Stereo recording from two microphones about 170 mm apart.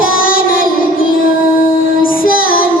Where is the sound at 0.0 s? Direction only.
55° left (ahead or behind).